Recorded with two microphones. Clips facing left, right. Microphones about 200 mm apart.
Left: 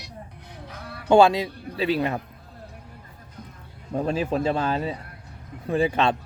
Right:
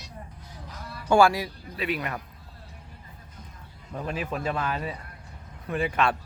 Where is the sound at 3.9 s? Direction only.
30° left (ahead or behind).